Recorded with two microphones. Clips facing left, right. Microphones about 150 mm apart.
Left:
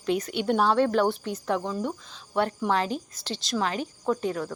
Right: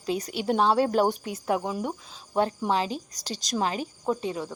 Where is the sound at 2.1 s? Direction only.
35° right (ahead or behind).